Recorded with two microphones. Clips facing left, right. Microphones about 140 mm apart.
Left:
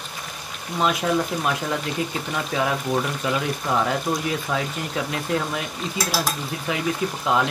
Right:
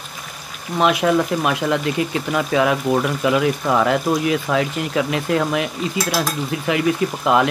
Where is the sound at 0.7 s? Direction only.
70° right (ahead or behind).